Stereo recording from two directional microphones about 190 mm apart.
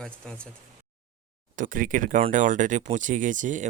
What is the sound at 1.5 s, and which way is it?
Speech, 45° right (ahead or behind).